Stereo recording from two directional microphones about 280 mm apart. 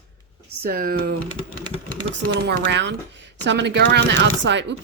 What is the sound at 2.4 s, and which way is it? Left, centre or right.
Speech, right.